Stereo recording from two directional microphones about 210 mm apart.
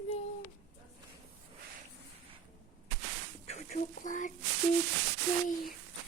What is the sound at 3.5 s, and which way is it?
Speech, 35° left (ahead or behind).